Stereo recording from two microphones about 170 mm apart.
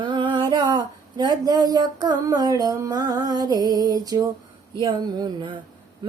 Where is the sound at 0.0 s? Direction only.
30° right (ahead or behind).